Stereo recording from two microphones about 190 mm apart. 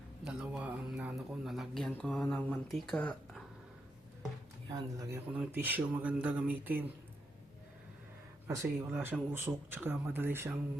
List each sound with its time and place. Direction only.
0.3 s speech: 5° right (ahead or behind)
4.7 s speech: 20° right (ahead or behind)
8.4 s speech: 15° right (ahead or behind)